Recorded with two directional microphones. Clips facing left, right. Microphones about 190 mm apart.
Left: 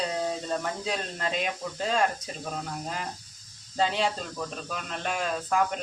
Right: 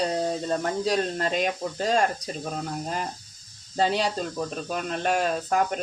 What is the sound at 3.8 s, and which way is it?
Speech, 40° right (ahead or behind).